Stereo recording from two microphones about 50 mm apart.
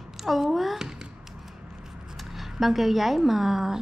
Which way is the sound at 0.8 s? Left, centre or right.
Centre.